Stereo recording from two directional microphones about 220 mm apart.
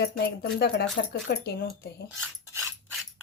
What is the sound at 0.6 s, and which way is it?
Speech, 45° left (ahead or behind).